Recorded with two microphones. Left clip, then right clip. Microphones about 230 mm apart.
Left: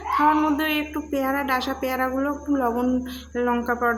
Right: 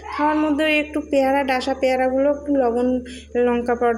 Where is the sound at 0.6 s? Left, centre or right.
Centre.